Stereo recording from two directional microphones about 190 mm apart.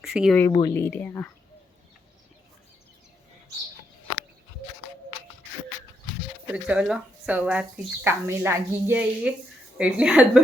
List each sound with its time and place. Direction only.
0.0 s speech: centre (ahead or behind)
0.5 s speech: 15° left (ahead or behind)
6.5 s speech: 5° right (ahead or behind)